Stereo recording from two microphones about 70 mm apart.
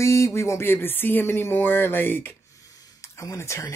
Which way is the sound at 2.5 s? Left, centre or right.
Left.